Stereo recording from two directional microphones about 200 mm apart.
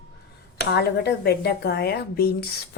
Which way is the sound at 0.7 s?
55° left (ahead or behind).